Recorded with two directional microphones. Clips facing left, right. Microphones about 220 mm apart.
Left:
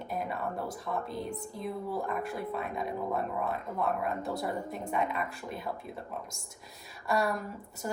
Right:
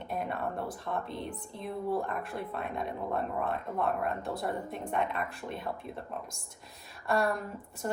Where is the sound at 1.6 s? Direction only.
Centre (ahead or behind).